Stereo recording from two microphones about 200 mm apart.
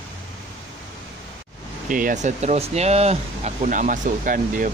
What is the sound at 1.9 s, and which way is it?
Speech, 40° right (ahead or behind).